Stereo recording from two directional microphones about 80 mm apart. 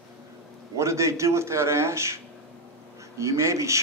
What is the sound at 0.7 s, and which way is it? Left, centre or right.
A man's voice, right.